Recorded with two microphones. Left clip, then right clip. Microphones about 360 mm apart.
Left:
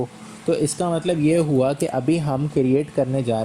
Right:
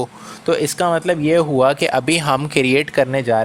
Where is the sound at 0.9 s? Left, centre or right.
Right.